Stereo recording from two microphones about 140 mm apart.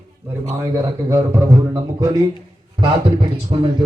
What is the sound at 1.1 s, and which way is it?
Speech, 20° right (ahead or behind).